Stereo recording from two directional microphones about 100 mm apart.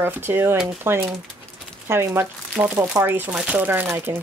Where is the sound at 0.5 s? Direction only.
5° right (ahead or behind).